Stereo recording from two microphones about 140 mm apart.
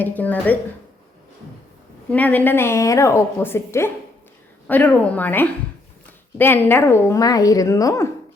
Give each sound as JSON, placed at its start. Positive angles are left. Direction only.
{"t": 0.0, "sound": "a woman's voice", "side_deg": 10}
{"t": 2.0, "sound": "a woman's voice", "side_deg": 10}